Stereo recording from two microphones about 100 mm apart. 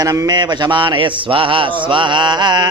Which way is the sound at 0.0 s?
35° right (ahead or behind).